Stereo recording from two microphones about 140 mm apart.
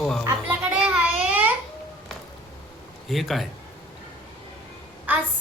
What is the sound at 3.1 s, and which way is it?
Speech, centre (ahead or behind).